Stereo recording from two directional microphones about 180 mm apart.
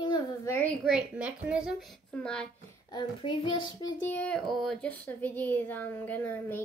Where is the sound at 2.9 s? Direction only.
25° left (ahead or behind).